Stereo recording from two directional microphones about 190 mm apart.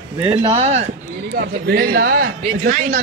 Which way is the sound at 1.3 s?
50° right (ahead or behind).